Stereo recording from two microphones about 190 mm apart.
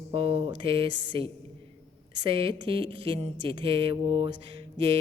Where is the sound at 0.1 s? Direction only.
30° right (ahead or behind).